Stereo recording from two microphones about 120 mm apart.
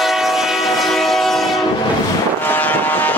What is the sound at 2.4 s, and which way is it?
Vehicle, 15° left (ahead or behind).